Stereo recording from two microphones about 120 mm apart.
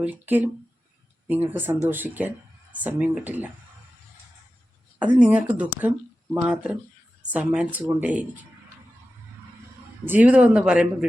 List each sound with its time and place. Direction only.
0.0 s speech: 15° right (ahead or behind)
4.9 s speech: 10° right (ahead or behind)
10.1 s speech: 10° right (ahead or behind)